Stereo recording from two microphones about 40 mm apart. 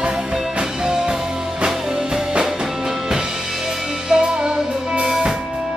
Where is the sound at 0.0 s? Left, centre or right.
Centre.